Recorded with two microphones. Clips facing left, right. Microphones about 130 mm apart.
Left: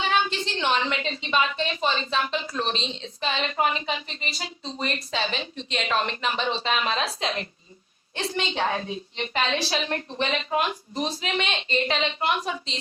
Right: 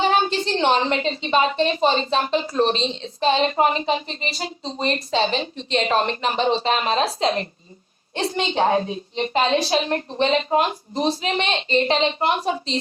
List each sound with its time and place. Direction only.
0.0 s a woman's voice: 40° right (ahead or behind)
4.6 s a woman's voice: 25° right (ahead or behind)